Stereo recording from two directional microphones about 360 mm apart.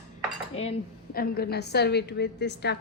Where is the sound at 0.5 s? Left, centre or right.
Centre.